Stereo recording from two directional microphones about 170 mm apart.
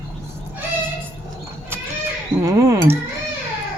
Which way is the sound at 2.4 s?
15° right (ahead or behind).